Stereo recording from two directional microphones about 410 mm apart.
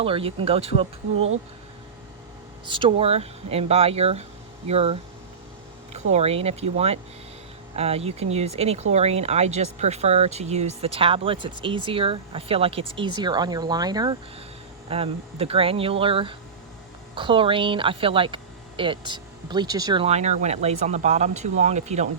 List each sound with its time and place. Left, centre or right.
0.0 s speech: centre
2.6 s speech: centre